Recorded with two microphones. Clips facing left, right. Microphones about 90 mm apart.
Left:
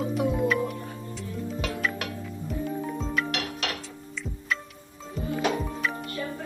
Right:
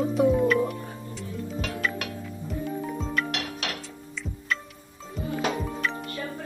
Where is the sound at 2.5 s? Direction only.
Centre (ahead or behind).